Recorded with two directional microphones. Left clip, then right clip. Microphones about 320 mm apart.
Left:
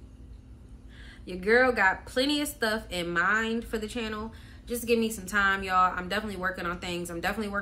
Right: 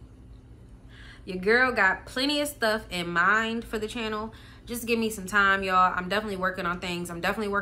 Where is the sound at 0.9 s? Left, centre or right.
Centre.